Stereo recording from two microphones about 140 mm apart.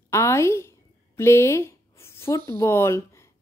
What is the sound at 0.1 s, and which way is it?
A woman's voice, 20° left (ahead or behind).